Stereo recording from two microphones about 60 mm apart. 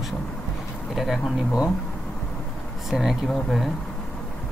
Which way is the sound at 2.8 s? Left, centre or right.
Centre.